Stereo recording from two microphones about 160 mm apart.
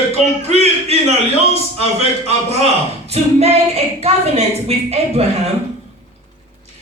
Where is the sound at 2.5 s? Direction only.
40° right (ahead or behind).